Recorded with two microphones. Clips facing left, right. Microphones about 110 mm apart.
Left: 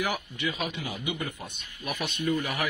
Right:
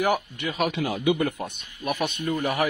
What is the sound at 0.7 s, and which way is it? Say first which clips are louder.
Speech: right 10 dB; 90° right.